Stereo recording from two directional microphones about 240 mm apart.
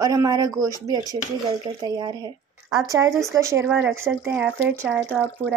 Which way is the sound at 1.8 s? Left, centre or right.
Centre.